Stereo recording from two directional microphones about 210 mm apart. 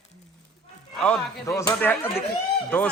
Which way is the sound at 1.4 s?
15° left (ahead or behind).